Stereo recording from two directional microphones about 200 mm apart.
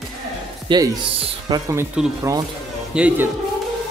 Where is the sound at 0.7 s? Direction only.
20° right (ahead or behind).